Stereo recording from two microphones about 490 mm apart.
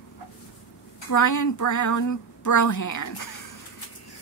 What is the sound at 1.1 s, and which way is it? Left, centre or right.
Speech, left.